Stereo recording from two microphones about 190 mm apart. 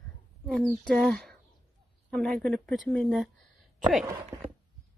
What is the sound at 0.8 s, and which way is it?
Speech, centre (ahead or behind).